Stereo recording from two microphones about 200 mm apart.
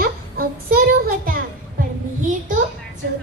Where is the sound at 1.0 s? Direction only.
45° right (ahead or behind).